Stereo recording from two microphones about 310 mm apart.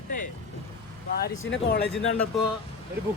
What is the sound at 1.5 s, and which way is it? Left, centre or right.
Speech, left.